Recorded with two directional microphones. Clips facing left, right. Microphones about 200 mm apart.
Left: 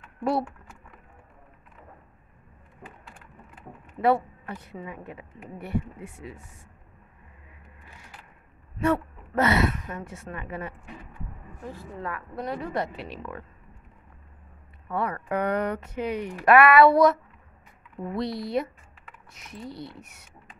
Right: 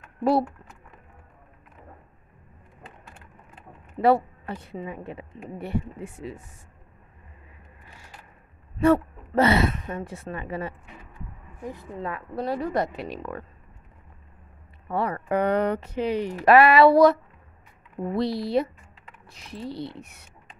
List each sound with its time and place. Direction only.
0.0 s typing: 35° right (ahead or behind)
3.5 s speech: 30° right (ahead or behind)
8.8 s a woman's voice: 30° right (ahead or behind)
11.6 s speech: 20° right (ahead or behind)
12.7 s speech: 45° right (ahead or behind)
14.9 s speech: 30° right (ahead or behind)